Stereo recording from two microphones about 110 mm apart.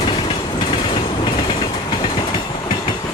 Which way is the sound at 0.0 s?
45° left (ahead or behind).